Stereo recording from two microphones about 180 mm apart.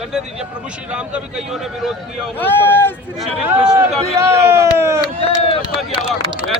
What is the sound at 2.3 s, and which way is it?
Speech, 10° left (ahead or behind).